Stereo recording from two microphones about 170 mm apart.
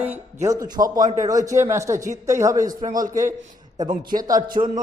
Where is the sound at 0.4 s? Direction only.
20° right (ahead or behind).